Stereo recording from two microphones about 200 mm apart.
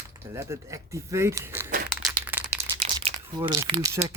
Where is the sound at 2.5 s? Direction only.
15° right (ahead or behind).